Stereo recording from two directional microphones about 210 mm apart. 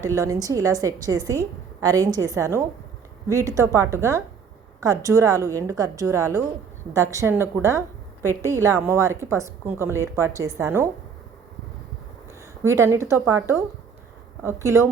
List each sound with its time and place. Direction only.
0.0 s a woman's voice: 15° right (ahead or behind)
12.6 s a woman's voice: 15° right (ahead or behind)